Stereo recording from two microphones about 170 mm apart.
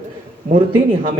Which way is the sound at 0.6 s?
30° right (ahead or behind).